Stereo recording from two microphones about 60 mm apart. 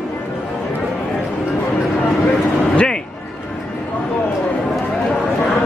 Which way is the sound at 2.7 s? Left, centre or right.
Centre.